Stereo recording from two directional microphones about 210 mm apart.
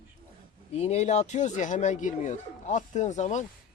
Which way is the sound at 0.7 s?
30° left (ahead or behind).